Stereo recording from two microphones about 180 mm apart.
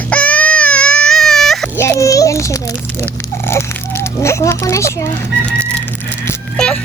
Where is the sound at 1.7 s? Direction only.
15° left (ahead or behind).